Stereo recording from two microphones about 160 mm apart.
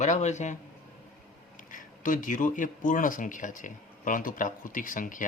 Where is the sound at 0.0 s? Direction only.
45° left (ahead or behind).